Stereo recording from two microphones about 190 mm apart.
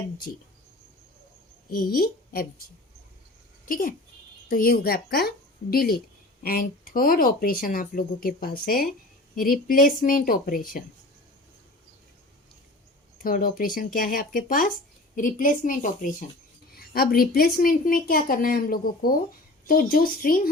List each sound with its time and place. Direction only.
1.7 s a woman's voice: 50° left (ahead or behind)
3.7 s a woman's voice: 45° left (ahead or behind)
13.2 s a woman's voice: 50° left (ahead or behind)